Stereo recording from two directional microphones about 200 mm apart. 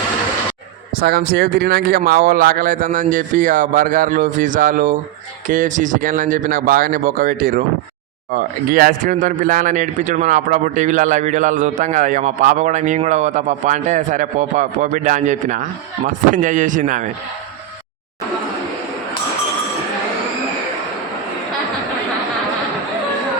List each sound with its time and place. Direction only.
0.9 s speech: 50° right (ahead or behind)
8.7 s a man's voice: 45° right (ahead or behind)